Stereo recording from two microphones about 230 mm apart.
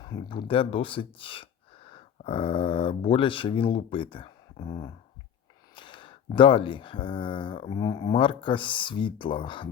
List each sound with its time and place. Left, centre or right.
0.0 s speech: centre